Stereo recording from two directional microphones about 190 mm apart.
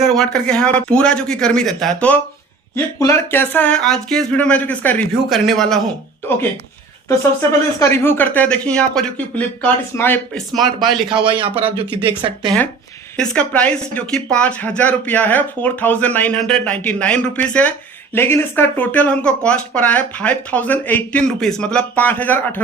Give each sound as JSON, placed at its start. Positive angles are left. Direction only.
{"t": 0.0, "sound": "a man's voice", "side_deg": 0}
{"t": 7.8, "sound": "speech", "side_deg": 10}
{"t": 11.1, "sound": "speech", "side_deg": -25}
{"t": 13.1, "sound": "speech", "side_deg": 5}